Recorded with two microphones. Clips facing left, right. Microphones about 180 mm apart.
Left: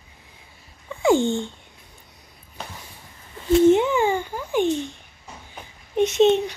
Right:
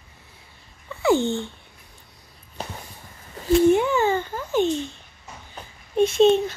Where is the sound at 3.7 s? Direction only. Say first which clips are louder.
Left 1 dB; 20° left (ahead or behind).